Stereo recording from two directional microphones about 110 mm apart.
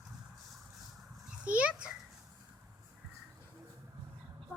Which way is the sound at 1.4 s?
10° right (ahead or behind).